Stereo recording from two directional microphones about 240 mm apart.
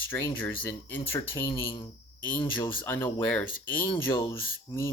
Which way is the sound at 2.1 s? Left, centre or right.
Centre.